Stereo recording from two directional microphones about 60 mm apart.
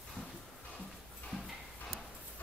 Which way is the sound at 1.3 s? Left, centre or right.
Centre.